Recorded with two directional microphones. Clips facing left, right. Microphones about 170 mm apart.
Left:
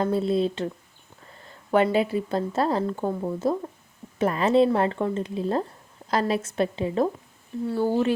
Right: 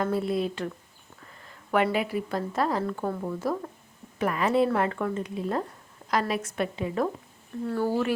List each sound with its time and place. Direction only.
0.0 s a woman's voice: 25° left (ahead or behind)
7.7 s a woman's voice: 15° left (ahead or behind)